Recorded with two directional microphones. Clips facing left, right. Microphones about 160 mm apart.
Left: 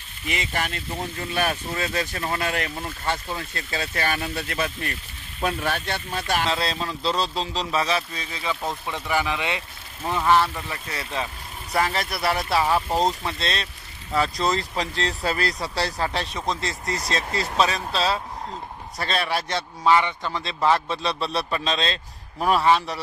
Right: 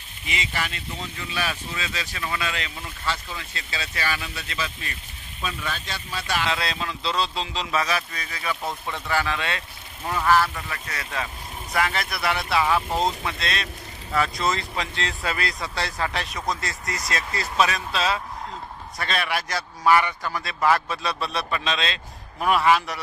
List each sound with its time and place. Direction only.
0.3 s speech: 50° left (ahead or behind)
6.5 s a man's voice: 35° left (ahead or behind)